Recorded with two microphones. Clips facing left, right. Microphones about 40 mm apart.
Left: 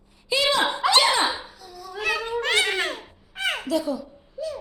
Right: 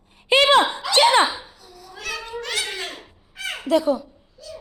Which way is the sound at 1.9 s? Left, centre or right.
Left.